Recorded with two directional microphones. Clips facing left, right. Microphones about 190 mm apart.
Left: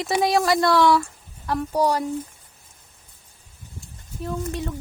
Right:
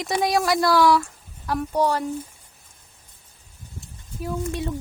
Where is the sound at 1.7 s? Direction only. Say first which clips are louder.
Left 1 dB; 10° left (ahead or behind).